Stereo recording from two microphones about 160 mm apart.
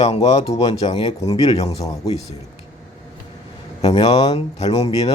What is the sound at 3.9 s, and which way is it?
Speech, 25° left (ahead or behind).